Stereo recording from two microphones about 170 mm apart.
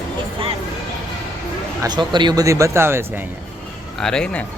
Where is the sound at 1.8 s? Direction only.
25° right (ahead or behind).